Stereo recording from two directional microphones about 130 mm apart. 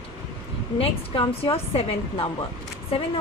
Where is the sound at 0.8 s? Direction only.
45° left (ahead or behind).